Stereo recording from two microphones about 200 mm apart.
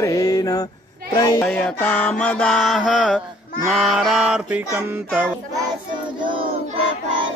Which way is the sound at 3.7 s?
Centre (ahead or behind).